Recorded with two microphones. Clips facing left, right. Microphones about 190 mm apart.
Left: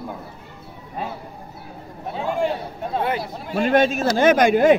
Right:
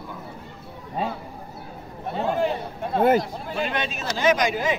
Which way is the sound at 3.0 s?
45° right (ahead or behind).